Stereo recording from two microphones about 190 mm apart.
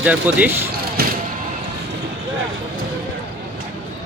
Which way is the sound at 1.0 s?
55° right (ahead or behind).